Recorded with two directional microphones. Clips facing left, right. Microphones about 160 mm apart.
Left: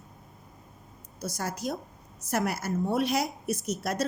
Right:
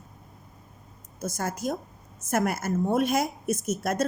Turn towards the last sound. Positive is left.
turn(degrees=-50)  # may be behind; listen again after turning